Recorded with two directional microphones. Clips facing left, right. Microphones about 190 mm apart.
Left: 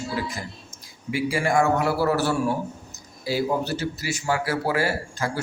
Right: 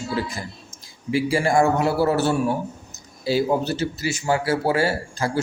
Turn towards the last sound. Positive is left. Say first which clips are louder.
# right 3 dB
turn(degrees=-30)  # may be behind; listen again after turning